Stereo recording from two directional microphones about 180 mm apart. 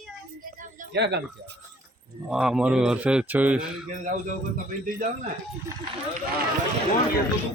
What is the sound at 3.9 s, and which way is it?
A man's voice, 50° right (ahead or behind).